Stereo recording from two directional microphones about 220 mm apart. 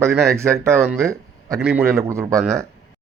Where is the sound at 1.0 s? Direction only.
15° right (ahead or behind).